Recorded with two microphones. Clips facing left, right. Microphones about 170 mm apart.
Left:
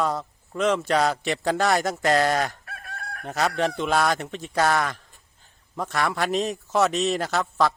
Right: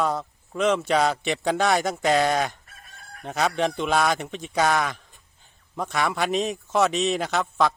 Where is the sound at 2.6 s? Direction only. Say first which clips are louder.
Left 11 dB; 75° left (ahead or behind).